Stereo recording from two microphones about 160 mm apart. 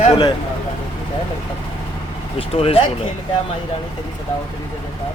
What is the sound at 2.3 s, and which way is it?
Speech, 35° left (ahead or behind).